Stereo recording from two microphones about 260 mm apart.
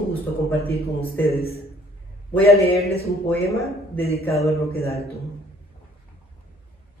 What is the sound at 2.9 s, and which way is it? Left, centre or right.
Speech, left.